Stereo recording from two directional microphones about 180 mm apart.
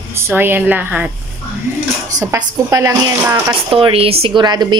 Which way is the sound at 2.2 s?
15° right (ahead or behind).